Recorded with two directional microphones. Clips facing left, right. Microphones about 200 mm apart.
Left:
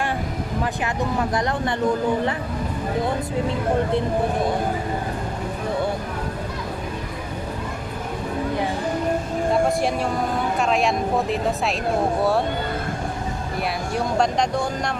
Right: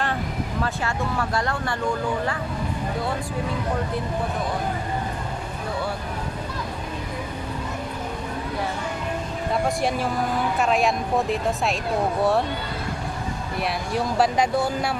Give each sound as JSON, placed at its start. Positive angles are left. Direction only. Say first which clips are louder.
{"t": 0.6, "sound": "speech", "louder": "left 2 dB", "side_deg": 20}
{"t": 9.5, "sound": "speech", "louder": "left 3 dB", "side_deg": 0}
{"t": 13.6, "sound": "speech", "louder": "even", "side_deg": -5}